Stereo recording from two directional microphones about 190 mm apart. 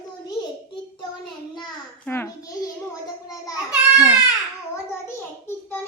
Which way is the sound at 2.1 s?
15° left (ahead or behind).